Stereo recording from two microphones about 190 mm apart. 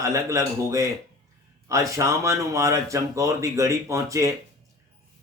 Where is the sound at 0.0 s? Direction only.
15° right (ahead or behind).